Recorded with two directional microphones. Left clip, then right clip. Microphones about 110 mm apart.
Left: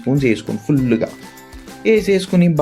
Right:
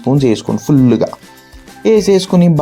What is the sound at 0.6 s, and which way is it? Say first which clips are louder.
Speech: right 6 dB; 55° right (ahead or behind).